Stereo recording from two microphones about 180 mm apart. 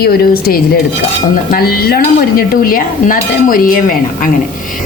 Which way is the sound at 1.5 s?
60° left (ahead or behind).